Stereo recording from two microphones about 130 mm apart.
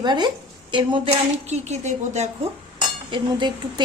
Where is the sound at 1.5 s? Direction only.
60° right (ahead or behind).